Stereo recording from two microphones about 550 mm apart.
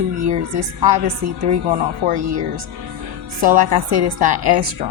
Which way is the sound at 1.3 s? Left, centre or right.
Right.